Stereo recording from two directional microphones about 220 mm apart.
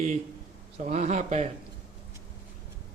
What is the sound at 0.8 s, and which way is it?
Speech, 30° right (ahead or behind).